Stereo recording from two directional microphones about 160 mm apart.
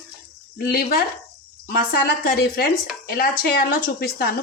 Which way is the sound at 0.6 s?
75° left (ahead or behind).